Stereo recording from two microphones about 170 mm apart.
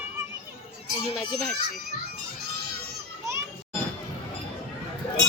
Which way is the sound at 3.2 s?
15° right (ahead or behind).